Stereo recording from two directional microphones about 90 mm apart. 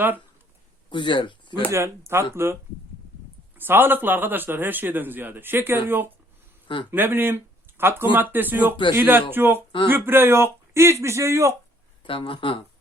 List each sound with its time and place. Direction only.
0.9 s speech: 65° left (ahead or behind)
1.7 s a man's voice: 30° right (ahead or behind)
3.6 s a man's voice: 25° right (ahead or behind)
8.7 s speech: 65° left (ahead or behind)
9.0 s a man's voice: 25° right (ahead or behind)
12.0 s speech: 80° left